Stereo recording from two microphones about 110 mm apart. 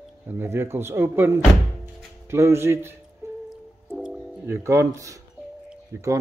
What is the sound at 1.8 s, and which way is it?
Music, 25° right (ahead or behind).